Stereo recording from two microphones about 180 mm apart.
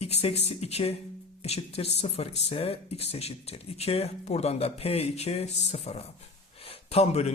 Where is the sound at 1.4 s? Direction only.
35° left (ahead or behind).